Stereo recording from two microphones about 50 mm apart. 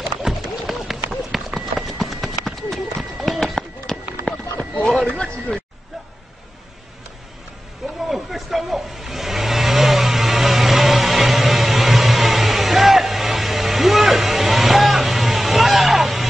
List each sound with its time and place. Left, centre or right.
0.0 s run: centre
4.3 s a sound: left
5.0 s speech: centre
8.1 s vehicle: centre